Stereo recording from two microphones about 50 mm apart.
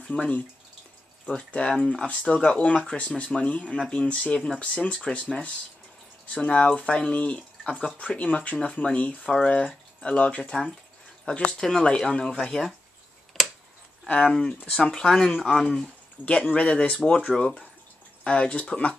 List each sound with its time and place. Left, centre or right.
0.1 s speech: left; by 12.7 s centre
13.4 s a sound: centre
14.2 s speech: centre
17.0 s speech: centre
17.4 s speech: centre